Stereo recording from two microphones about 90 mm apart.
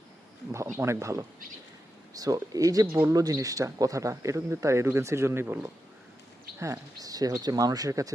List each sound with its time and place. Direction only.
0.8 s speech: 30° right (ahead or behind)
2.1 s speech: 45° right (ahead or behind); by 5.7 s 25° right (ahead or behind)
6.6 s speech: 40° right (ahead or behind)